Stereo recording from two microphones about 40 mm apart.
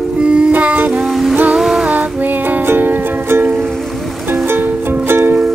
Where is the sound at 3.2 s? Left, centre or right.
Right.